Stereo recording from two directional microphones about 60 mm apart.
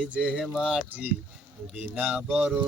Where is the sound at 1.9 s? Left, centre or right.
Right.